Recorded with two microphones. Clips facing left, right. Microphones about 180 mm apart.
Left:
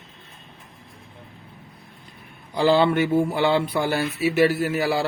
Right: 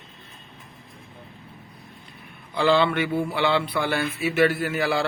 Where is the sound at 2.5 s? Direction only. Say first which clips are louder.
Left 2 dB; 40° left (ahead or behind).